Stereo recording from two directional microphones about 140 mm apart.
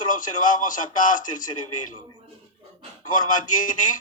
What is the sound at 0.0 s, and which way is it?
A man's voice, 70° left (ahead or behind).